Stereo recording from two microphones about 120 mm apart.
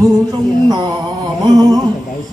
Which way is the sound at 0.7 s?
35° right (ahead or behind).